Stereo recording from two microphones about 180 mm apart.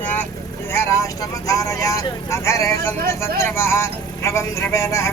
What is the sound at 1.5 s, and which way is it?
Speech, 20° left (ahead or behind).